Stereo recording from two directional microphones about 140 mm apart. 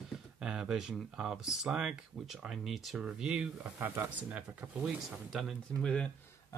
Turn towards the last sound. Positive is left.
turn(degrees=10)  # may be behind; listen again after turning